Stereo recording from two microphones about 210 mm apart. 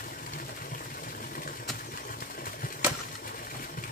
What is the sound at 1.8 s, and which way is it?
Bird flight, 40° left (ahead or behind).